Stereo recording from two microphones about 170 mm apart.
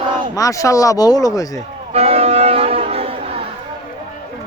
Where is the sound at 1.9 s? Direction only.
35° right (ahead or behind).